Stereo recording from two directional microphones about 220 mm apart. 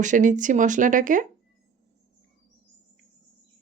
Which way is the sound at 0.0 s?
35° right (ahead or behind).